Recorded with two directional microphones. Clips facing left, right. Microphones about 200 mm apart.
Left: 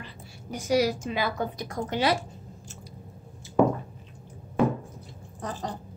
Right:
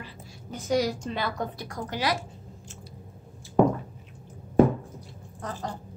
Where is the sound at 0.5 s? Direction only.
10° left (ahead or behind).